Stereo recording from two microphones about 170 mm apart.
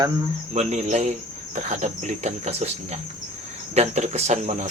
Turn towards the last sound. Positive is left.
turn(degrees=-40)  # may be behind; listen again after turning